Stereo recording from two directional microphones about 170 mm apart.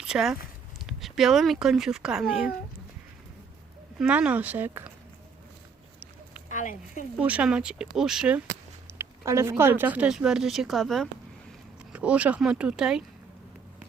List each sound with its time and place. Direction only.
0.0 s speech: 5° right (ahead or behind)
4.0 s speech: 5° right (ahead or behind)
6.5 s speech: 45° left (ahead or behind)
7.2 s speech: 10° right (ahead or behind)
9.0 s speech: 15° right (ahead or behind)